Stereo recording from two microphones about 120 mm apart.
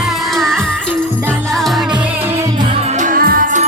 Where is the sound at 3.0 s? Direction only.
90° right.